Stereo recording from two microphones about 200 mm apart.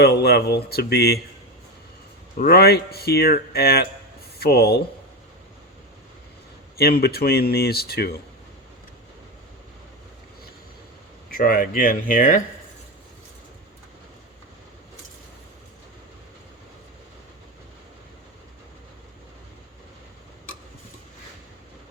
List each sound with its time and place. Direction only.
0.0 s speech: 55° left (ahead or behind)
2.3 s speech: 50° left (ahead or behind)
6.7 s speech: 50° left (ahead or behind)
11.3 s speech: 45° left (ahead or behind)